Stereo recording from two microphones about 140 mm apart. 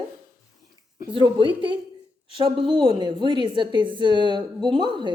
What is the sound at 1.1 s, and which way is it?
A woman's voice, 40° right (ahead or behind).